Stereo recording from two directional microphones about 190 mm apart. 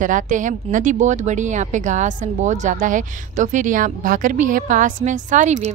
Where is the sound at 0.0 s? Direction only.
40° right (ahead or behind).